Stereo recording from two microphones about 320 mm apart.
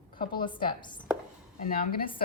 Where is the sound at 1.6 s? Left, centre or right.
Left.